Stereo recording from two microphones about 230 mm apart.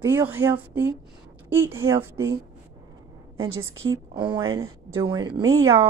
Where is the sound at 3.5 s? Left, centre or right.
Right.